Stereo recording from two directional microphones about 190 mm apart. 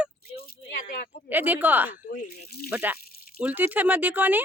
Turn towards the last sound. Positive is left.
turn(degrees=-10)  # may be behind; listen again after turning